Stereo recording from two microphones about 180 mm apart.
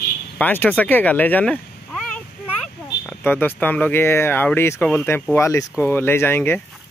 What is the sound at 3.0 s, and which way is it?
Speech, 10° left (ahead or behind).